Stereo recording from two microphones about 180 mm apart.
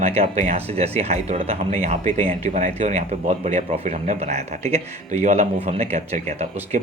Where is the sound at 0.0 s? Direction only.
35° right (ahead or behind).